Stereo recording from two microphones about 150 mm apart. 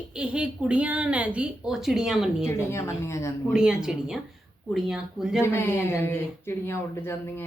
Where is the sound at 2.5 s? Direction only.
20° left (ahead or behind).